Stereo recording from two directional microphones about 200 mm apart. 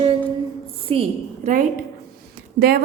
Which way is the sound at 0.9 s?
35° right (ahead or behind).